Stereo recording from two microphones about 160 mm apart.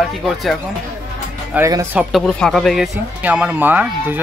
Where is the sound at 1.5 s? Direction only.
10° right (ahead or behind).